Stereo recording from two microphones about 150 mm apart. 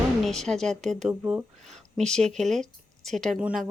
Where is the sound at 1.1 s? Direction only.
10° right (ahead or behind).